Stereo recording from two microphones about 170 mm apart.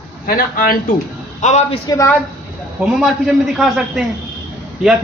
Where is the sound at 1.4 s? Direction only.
45° left (ahead or behind).